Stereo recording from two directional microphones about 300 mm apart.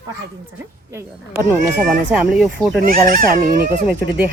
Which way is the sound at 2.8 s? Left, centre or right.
Right.